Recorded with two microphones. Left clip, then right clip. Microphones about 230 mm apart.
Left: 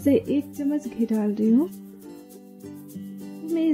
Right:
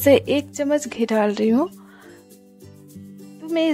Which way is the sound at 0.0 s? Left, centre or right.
Right.